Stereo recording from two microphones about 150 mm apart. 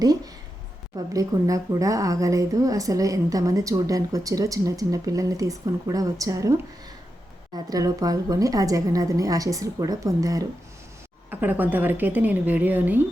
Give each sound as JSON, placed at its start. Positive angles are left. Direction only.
{"t": 0.9, "sound": "speech", "side_deg": -25}
{"t": 7.5, "sound": "a woman's voice", "side_deg": -25}